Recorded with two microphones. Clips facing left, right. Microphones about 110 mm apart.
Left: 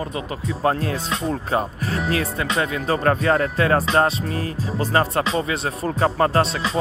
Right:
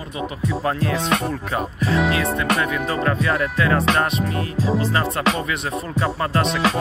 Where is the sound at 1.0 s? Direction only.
65° right (ahead or behind).